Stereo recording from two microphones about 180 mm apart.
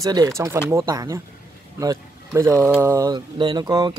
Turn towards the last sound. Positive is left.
turn(degrees=-20)  # may be behind; listen again after turning